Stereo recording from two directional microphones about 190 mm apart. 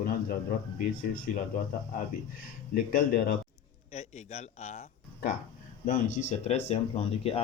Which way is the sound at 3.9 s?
35° left (ahead or behind).